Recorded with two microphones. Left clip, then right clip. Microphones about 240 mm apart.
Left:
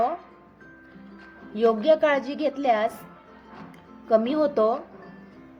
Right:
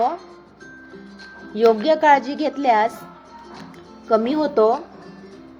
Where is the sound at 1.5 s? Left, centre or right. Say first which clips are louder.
Right 4 dB; centre.